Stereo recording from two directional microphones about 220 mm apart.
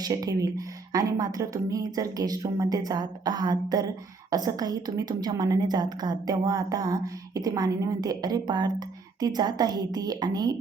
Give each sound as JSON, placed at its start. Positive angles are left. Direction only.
{"t": 0.0, "sound": "a woman's voice", "side_deg": -15}